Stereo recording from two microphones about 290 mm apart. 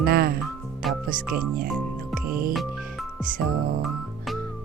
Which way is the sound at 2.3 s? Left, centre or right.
Right.